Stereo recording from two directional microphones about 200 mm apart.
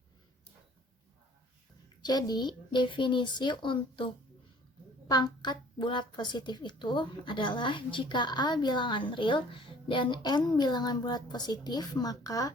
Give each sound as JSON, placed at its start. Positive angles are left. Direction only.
{"t": 2.0, "sound": "a woman's voice", "side_deg": 20}